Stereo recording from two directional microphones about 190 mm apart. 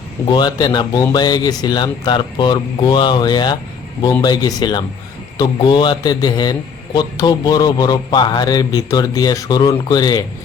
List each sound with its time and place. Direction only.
0.3 s a man's voice: 25° left (ahead or behind)